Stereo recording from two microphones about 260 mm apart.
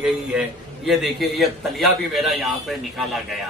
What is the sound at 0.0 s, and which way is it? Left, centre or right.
A man's voice, centre.